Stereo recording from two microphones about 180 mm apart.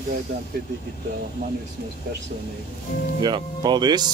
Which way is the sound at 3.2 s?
25° right (ahead or behind).